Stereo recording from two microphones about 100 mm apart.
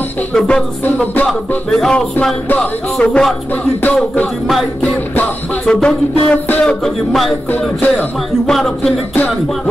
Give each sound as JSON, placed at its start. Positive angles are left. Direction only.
{"t": 0.3, "sound": "music", "side_deg": 5}
{"t": 3.0, "sound": "music", "side_deg": 5}
{"t": 7.1, "sound": "speech", "side_deg": 0}
{"t": 8.5, "sound": "speech", "side_deg": 5}